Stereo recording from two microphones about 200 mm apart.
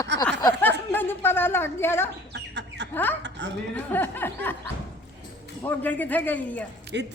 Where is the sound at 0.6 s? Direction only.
10° left (ahead or behind).